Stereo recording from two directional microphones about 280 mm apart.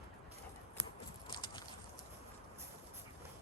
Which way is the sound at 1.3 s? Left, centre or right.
Centre.